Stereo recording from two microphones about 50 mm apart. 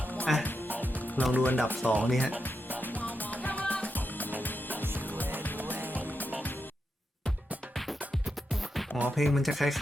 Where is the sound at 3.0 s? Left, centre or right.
Left.